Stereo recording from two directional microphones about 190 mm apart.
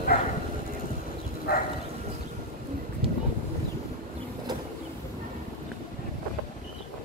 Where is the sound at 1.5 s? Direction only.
50° left (ahead or behind).